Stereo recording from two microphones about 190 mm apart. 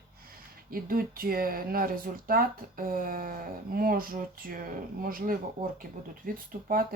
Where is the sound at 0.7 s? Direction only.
50° right (ahead or behind).